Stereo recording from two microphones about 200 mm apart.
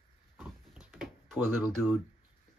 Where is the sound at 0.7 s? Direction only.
5° right (ahead or behind).